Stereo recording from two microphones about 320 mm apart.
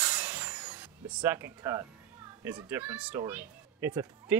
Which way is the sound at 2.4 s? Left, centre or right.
Centre.